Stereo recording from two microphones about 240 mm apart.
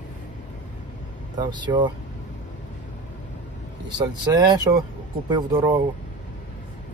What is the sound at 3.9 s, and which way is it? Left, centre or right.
Speech, centre.